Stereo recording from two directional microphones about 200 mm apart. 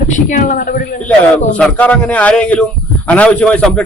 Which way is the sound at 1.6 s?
5° left (ahead or behind).